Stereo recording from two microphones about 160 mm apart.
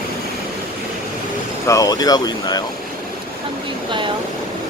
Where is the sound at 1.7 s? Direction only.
20° left (ahead or behind).